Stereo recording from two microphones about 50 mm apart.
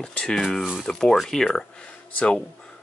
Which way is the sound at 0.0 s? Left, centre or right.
Centre.